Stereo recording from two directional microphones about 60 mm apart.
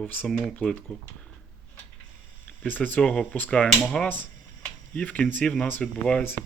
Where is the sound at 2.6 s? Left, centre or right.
Left.